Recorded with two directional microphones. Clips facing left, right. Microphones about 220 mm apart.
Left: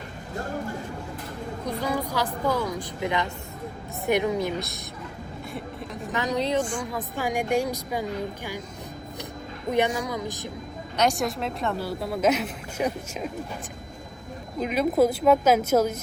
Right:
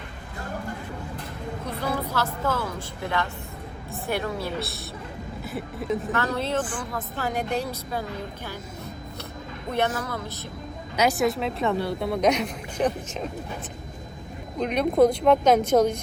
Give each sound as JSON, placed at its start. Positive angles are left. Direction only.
{"t": 1.6, "sound": "a woman's voice", "side_deg": 15}
{"t": 5.5, "sound": "speech", "side_deg": 0}
{"t": 6.1, "sound": "a woman's voice", "side_deg": 15}
{"t": 9.7, "sound": "a woman's voice", "side_deg": 10}
{"t": 10.9, "sound": "speech", "side_deg": -5}
{"t": 14.6, "sound": "speech", "side_deg": 5}